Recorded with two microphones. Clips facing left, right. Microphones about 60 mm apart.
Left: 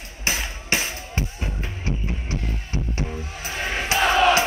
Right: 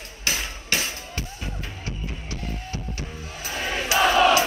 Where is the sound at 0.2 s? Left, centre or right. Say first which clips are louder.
Left 2 dB; left.